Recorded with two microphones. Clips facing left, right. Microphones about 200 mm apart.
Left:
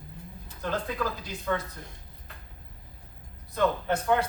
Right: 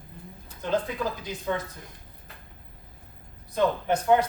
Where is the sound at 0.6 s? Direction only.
20° right (ahead or behind).